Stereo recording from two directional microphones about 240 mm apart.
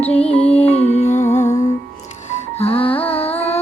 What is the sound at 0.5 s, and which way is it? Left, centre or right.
Music, left.